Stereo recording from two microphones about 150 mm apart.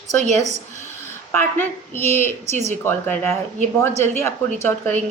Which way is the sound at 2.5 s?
50° right (ahead or behind).